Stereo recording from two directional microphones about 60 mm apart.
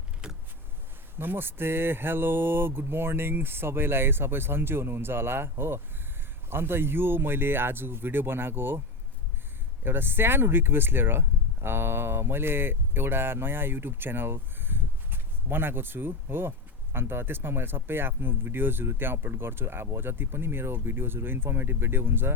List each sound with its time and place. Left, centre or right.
1.2 s speech: right
9.8 s speech: right